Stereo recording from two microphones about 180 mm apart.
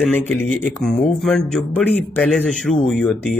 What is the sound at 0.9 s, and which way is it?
Speech, 40° left (ahead or behind).